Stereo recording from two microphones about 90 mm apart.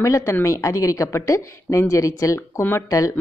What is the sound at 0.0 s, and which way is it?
Speech, 35° left (ahead or behind).